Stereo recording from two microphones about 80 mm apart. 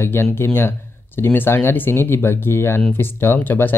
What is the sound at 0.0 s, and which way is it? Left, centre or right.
Speech, left.